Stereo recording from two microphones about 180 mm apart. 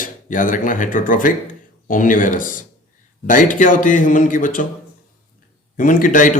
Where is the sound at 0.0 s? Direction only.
50° left (ahead or behind).